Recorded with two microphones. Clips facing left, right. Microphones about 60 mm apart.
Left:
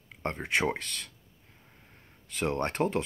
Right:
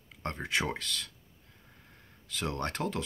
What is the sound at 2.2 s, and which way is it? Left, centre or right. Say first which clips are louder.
Speech: left 4 dB; left.